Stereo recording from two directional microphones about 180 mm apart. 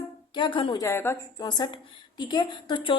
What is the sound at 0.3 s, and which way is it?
Speech, 25° left (ahead or behind).